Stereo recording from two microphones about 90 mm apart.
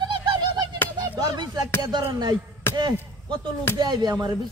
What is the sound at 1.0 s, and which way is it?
Speech, 50° right (ahead or behind).